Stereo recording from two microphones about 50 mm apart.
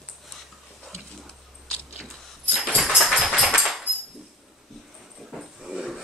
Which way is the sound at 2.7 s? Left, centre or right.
Centre.